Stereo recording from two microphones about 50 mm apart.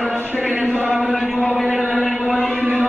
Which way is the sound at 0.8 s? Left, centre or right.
Centre.